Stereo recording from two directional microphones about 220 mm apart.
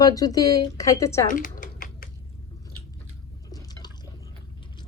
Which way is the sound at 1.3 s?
35° left (ahead or behind).